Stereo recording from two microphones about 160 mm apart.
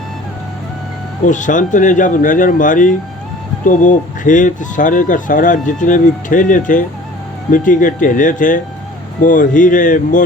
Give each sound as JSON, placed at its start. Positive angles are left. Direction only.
{"t": 1.2, "sound": "speech", "side_deg": 50}